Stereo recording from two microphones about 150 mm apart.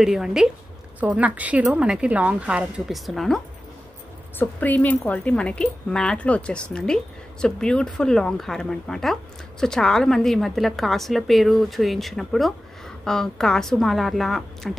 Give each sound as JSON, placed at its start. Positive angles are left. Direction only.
{"t": 0.0, "sound": "a woman's voice", "side_deg": -5}
{"t": 4.4, "sound": "speech", "side_deg": 10}